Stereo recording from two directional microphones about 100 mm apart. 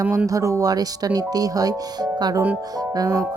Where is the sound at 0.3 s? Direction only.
35° right (ahead or behind).